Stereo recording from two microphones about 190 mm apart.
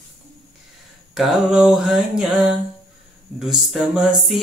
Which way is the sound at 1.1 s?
5° right (ahead or behind).